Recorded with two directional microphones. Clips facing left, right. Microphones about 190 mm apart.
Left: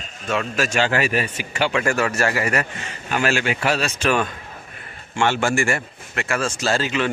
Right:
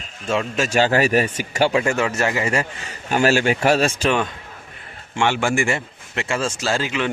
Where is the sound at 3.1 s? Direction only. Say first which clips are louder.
Right 4 dB; 40° right (ahead or behind).